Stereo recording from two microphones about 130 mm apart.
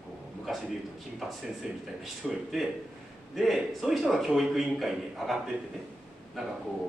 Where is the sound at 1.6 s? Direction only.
5° right (ahead or behind).